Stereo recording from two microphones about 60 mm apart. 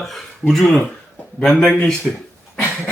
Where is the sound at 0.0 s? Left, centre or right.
Centre.